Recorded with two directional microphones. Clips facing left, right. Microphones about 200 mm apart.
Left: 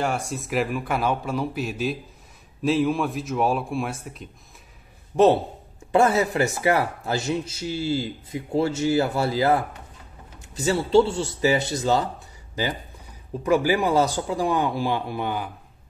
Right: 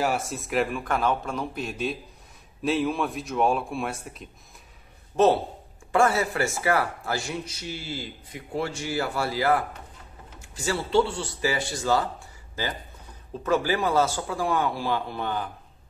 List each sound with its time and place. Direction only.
0.0 s a man's voice: 5° right (ahead or behind)
5.1 s a man's voice: 15° left (ahead or behind)
13.4 s a man's voice: 15° left (ahead or behind)